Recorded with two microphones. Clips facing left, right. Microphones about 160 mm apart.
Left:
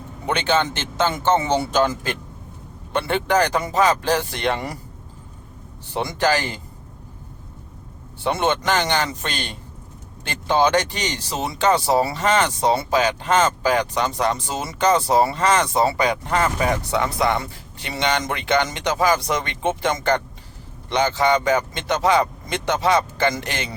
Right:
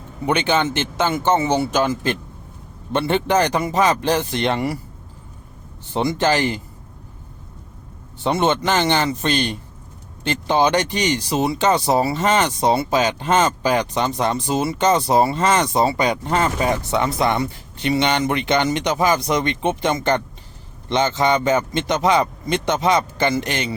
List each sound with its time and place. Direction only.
0.3 s speech: 15° right (ahead or behind)
2.9 s speech: 20° right (ahead or behind)
5.9 s speech: 20° right (ahead or behind)
8.2 s speech: 20° right (ahead or behind)